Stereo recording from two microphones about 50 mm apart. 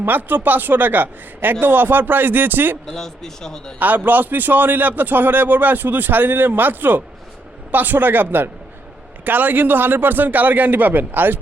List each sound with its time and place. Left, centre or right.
0.0 s a man's voice: right
2.8 s speech: centre
3.8 s a man's voice: right